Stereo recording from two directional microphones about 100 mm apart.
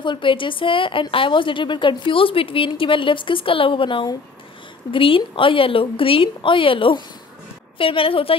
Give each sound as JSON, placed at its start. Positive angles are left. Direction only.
{"t": 0.0, "sound": "a woman's voice", "side_deg": 55}